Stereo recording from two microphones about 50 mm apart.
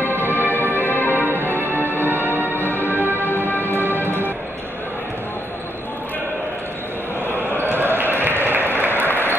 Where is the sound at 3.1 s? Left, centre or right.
Left.